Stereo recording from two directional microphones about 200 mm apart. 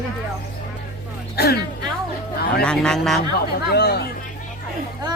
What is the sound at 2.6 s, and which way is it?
Speech, 5° left (ahead or behind).